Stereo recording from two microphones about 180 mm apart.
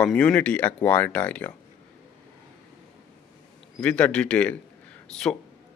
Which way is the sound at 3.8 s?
5° left (ahead or behind).